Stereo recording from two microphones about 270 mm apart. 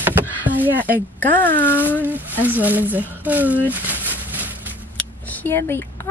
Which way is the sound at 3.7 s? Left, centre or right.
Centre.